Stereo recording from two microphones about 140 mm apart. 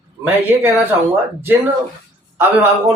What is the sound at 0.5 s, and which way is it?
Speech, 15° right (ahead or behind).